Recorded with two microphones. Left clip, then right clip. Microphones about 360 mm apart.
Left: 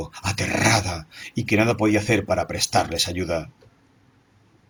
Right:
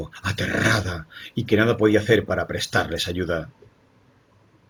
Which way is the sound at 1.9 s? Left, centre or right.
Centre.